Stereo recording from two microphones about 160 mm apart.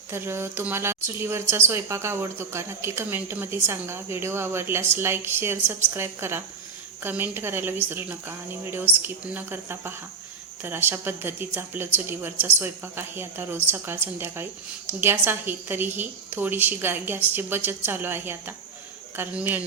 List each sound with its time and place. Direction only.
0.1 s speech: 15° right (ahead or behind)